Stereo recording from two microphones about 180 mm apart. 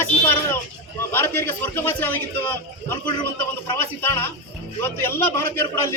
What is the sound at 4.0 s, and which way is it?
A man's voice, 10° left (ahead or behind).